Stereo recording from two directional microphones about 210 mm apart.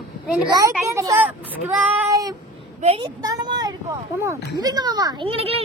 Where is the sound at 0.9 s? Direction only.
15° right (ahead or behind).